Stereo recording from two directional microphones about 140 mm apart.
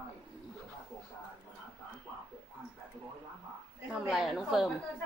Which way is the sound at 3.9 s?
Centre (ahead or behind).